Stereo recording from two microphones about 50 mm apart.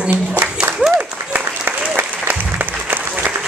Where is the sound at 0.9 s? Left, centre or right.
Right.